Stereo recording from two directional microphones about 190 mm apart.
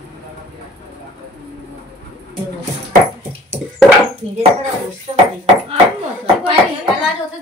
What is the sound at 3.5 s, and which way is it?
Dog, 35° right (ahead or behind).